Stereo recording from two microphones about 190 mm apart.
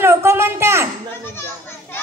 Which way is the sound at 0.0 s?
15° right (ahead or behind).